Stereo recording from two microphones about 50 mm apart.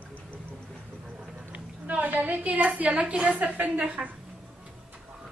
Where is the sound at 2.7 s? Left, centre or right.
Right.